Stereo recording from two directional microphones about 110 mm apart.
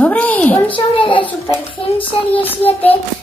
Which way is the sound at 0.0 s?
15° left (ahead or behind).